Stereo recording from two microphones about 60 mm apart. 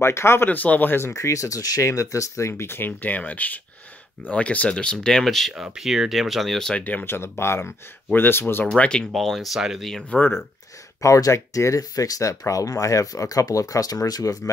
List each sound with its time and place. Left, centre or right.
0.0 s speech: left
0.5 s speech: left
1.1 s speech: left
3.0 s speech: left
4.9 s speech: centre
5.6 s speech: centre
6.8 s speech: left
7.1 s speech: left
8.6 s speech: centre
9.1 s speech: centre
9.8 s speech: centre
11.0 s speech: left